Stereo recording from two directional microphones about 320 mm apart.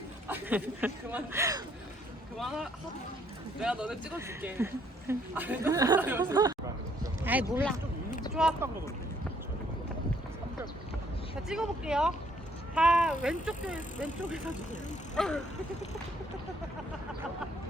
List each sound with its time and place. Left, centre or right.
0.3 s speech: centre
11.4 s speech: centre
14.5 s speech: left
15.1 s speech: centre